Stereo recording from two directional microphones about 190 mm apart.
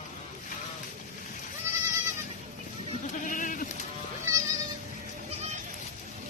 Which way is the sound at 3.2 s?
45° left (ahead or behind).